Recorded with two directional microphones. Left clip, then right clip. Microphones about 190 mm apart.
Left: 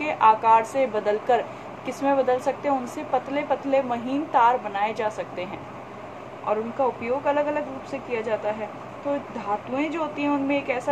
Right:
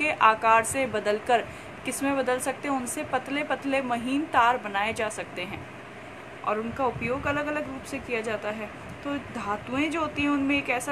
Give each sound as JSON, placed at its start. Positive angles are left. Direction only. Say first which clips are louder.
{"t": 0.0, "sound": "speech", "louder": "left 2 dB", "side_deg": -55}